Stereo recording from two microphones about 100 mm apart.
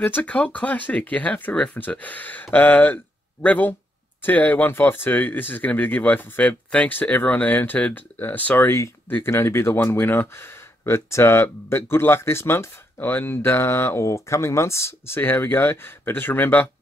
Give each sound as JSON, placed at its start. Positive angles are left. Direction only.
{"t": 0.0, "sound": "speech", "side_deg": 15}